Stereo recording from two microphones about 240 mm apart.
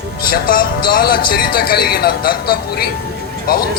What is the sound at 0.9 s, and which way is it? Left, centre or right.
Speech, left.